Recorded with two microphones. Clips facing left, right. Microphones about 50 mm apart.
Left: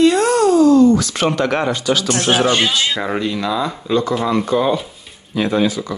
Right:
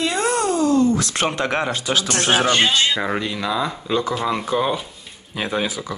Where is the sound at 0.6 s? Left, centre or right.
Left.